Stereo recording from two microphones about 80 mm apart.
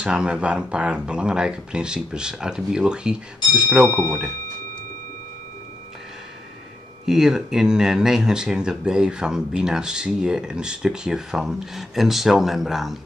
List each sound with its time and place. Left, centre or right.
0.0 s speech: centre
3.9 s speech: left
7.1 s speech: centre